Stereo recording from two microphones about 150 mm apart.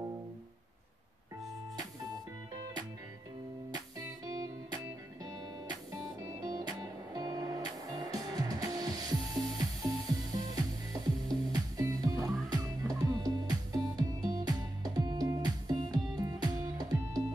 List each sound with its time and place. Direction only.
2.5 s music: 25° right (ahead or behind)
5.2 s music: 25° right (ahead or behind)